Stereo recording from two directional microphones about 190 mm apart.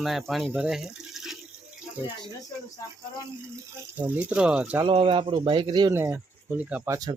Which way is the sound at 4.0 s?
10° right (ahead or behind).